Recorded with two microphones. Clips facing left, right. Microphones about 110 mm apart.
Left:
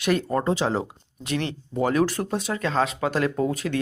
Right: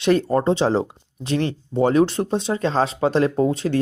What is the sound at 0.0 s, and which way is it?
Speech, 30° right (ahead or behind).